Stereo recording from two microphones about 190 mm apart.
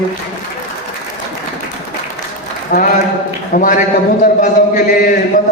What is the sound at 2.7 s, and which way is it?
A man's voice, 40° left (ahead or behind).